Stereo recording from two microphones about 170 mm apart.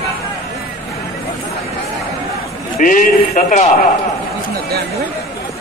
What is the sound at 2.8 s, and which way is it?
Speech, 50° left (ahead or behind).